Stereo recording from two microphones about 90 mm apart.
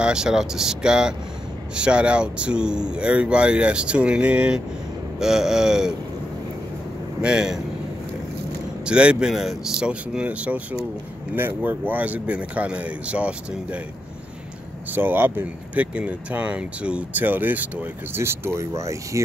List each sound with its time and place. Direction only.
0.0 s speech: 10° right (ahead or behind)
7.2 s speech: 10° right (ahead or behind)
8.8 s speech: 10° right (ahead or behind)
14.9 s speech: 20° right (ahead or behind)